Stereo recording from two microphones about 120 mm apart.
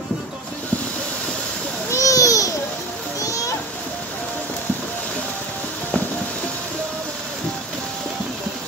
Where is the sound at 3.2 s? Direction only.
30° left (ahead or behind).